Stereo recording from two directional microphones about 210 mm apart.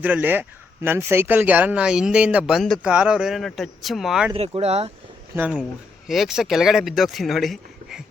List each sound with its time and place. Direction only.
0.0 s speech: 10° right (ahead or behind)
4.4 s speech: 30° right (ahead or behind)
5.4 s speech: 5° right (ahead or behind)